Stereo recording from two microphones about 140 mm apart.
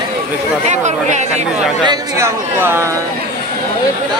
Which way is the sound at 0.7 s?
55° right (ahead or behind).